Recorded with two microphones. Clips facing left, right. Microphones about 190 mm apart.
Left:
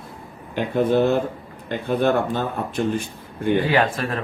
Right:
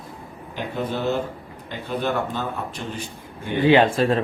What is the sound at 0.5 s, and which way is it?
Speech, 55° left (ahead or behind).